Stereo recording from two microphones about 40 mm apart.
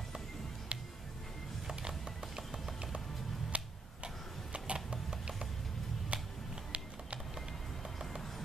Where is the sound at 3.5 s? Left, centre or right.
Right.